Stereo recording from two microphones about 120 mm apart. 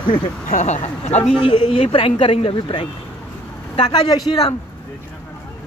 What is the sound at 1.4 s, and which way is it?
Speech, 40° left (ahead or behind).